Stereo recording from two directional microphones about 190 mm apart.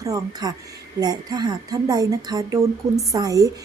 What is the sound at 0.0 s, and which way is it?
A woman's voice, 20° right (ahead or behind).